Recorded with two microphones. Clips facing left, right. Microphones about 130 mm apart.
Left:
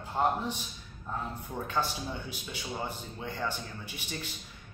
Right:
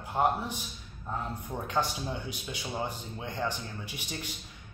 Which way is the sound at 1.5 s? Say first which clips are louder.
Right 1 dB; 15° right (ahead or behind).